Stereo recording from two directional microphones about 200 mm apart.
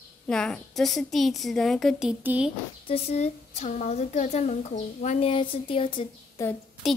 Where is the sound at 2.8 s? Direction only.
30° left (ahead or behind).